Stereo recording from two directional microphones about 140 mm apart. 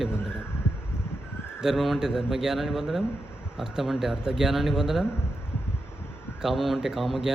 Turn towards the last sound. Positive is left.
turn(degrees=0)  # may be behind; listen again after turning